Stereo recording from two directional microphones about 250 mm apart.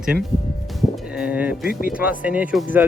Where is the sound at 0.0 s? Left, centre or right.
Centre.